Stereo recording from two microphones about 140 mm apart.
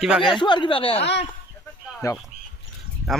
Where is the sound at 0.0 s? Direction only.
Centre (ahead or behind).